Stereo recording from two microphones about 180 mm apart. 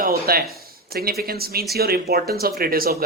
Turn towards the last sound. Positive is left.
turn(degrees=-55)  # may be behind; listen again after turning